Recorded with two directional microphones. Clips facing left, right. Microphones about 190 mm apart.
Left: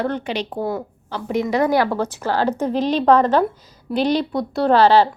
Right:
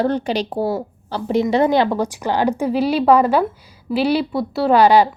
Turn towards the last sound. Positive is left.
turn(degrees=-15)  # may be behind; listen again after turning